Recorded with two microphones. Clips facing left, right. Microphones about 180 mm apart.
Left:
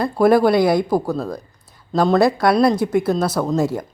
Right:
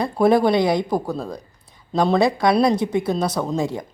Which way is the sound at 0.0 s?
Centre (ahead or behind).